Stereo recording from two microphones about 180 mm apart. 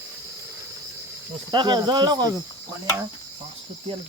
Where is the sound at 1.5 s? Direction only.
25° right (ahead or behind).